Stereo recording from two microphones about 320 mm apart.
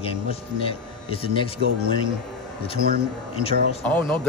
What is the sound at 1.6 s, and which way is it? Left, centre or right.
Speech, right.